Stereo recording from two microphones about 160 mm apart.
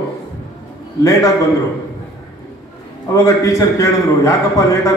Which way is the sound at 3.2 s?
20° left (ahead or behind).